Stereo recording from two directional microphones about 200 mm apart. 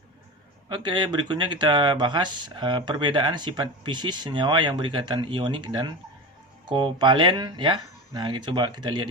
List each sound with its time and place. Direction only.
0.7 s speech: 20° right (ahead or behind)